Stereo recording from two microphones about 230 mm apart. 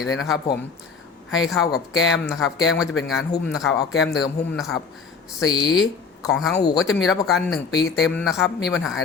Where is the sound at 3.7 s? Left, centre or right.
Left.